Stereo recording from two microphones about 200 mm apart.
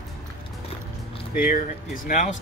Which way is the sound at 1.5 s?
45° left (ahead or behind).